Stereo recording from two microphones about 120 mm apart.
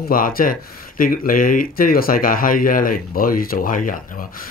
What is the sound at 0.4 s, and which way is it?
Speech, 90° left.